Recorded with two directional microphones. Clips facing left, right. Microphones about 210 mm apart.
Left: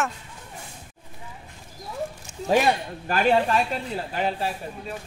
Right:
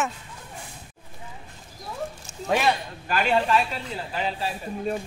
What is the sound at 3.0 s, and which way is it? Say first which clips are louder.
Speech: left 2 dB; 45° left (ahead or behind).